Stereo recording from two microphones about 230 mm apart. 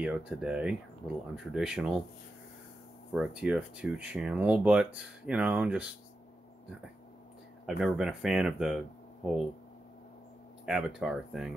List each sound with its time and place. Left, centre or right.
0.0 s speech: centre
3.2 s speech: centre
7.6 s speech: centre
10.6 s speech: centre